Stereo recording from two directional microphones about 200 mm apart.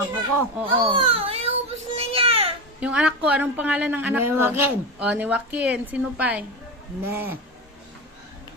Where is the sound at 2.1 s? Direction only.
30° right (ahead or behind).